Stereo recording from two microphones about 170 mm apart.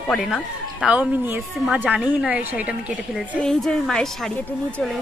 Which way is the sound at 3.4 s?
5° left (ahead or behind).